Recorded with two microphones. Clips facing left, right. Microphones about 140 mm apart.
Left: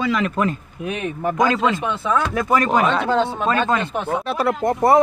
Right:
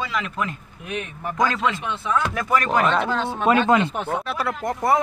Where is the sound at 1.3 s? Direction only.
20° left (ahead or behind).